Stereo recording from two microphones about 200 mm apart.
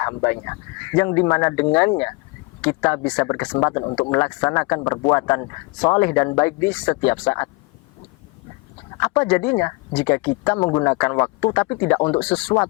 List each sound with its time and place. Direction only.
0.0 s speech: 15° left (ahead or behind)
9.0 s speech: 10° left (ahead or behind)
12.2 s speech: 5° left (ahead or behind)